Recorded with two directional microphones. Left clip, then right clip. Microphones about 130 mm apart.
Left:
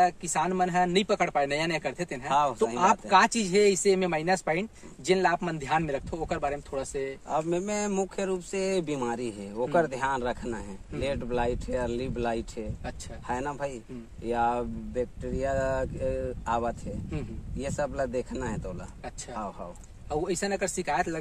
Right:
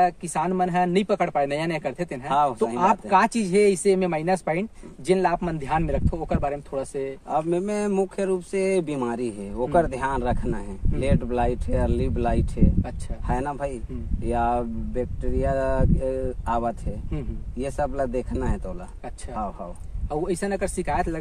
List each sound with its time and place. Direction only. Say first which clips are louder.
0.0 s speech: right 3 dB; 5° left (ahead or behind)
2.2 s speech: right 4 dB; 35° left (ahead or behind)
2.8 s speech: right 2 dB; 5° left (ahead or behind)
7.2 s speech: right 5 dB; 35° left (ahead or behind)
20.1 s speech: right 3 dB; 5° left (ahead or behind)